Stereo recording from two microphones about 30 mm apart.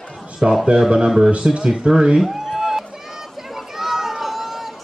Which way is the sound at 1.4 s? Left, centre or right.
Right.